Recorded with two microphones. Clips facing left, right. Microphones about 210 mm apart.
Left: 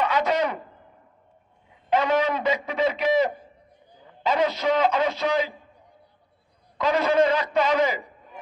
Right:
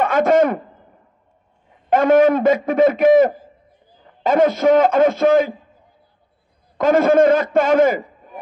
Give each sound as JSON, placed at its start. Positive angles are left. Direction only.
{"t": 0.0, "sound": "a man's voice", "side_deg": -50}
{"t": 1.9, "sound": "a man's voice", "side_deg": -50}
{"t": 6.8, "sound": "a man's voice", "side_deg": -50}